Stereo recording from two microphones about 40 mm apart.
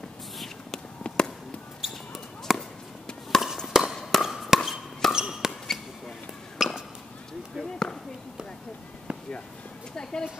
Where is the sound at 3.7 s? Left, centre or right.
Centre.